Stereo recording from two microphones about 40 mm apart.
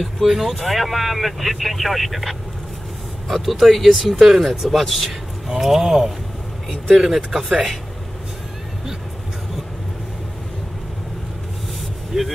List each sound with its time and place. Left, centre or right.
0.0 s speech: centre
5.5 s speech: centre
7.2 s speech: centre
12.1 s speech: centre